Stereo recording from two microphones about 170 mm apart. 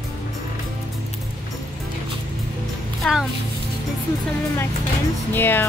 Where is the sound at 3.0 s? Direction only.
5° left (ahead or behind).